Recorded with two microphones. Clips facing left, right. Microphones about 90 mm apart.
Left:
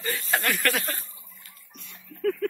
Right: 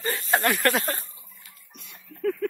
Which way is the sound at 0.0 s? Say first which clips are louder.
Right 3 dB; 30° right (ahead or behind).